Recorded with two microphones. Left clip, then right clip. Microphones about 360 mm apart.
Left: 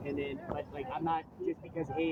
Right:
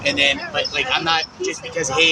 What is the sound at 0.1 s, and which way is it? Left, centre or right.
Speech, left.